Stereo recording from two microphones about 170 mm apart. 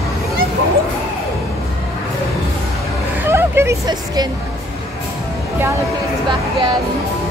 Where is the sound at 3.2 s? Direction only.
15° right (ahead or behind).